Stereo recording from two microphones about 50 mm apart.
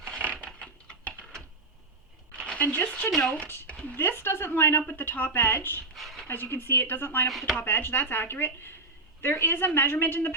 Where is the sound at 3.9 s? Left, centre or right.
Left.